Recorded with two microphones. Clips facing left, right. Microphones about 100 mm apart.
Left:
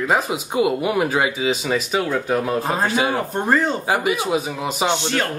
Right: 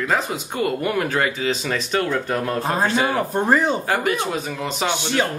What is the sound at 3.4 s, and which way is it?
Speech, 15° right (ahead or behind).